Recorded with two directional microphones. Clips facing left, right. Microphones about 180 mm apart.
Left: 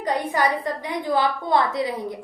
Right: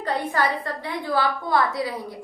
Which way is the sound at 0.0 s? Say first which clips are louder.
Left 2 dB; 15° left (ahead or behind).